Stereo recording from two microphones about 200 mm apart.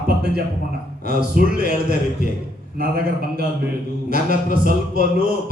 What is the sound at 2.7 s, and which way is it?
Speech, 50° right (ahead or behind).